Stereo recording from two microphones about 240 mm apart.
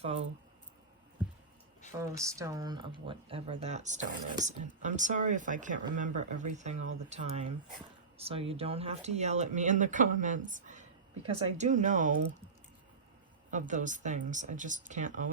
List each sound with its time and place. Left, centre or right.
0.0 s speech: right
1.9 s speech: centre; by 12.2 s right
13.5 s speech: right